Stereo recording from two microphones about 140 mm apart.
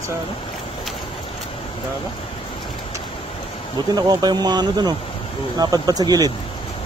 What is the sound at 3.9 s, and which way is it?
Speech, 30° right (ahead or behind).